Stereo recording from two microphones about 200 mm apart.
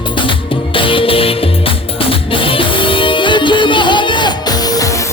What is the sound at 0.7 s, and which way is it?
Music, 25° left (ahead or behind).